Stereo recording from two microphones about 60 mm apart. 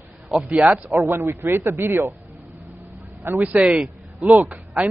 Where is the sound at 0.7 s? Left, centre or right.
Right.